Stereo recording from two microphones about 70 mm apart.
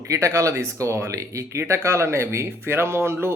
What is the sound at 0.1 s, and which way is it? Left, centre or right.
Speech, right.